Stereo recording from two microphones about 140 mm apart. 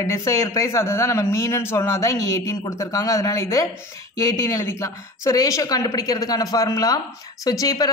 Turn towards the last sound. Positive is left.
turn(degrees=25)  # may be behind; listen again after turning